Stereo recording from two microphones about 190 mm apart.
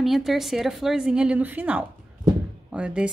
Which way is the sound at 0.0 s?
Centre (ahead or behind).